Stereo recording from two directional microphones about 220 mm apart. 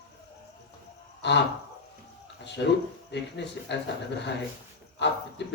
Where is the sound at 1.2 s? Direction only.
50° left (ahead or behind).